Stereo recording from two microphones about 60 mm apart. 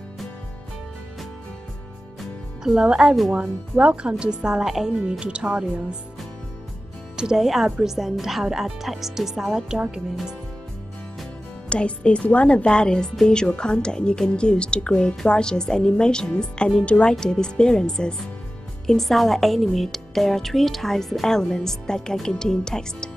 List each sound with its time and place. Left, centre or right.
2.6 s speech: centre
5.2 s speech: centre
7.2 s a woman's voice: centre
9.8 s speech: centre
11.7 s a woman's voice: centre